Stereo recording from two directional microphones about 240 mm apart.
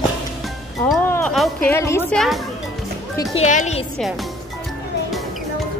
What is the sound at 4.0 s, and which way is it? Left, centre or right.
Speech, centre.